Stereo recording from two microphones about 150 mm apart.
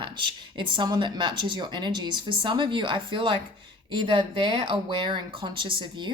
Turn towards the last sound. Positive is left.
turn(degrees=-35)  # may be behind; listen again after turning